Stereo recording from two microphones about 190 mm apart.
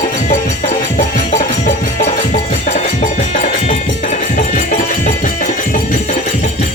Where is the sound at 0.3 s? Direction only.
40° left (ahead or behind).